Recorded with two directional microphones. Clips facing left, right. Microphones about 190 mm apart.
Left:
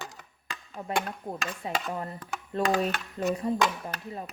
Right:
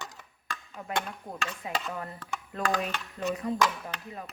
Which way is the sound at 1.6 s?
25° left (ahead or behind).